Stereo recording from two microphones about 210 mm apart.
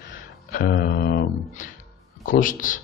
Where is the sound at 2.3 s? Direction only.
40° left (ahead or behind).